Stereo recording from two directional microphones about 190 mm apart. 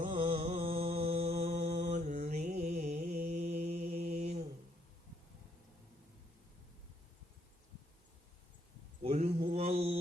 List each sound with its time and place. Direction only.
0.1 s mantra: 30° right (ahead or behind)
9.4 s mantra: 35° right (ahead or behind)